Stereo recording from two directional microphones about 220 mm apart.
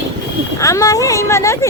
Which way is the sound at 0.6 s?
15° left (ahead or behind).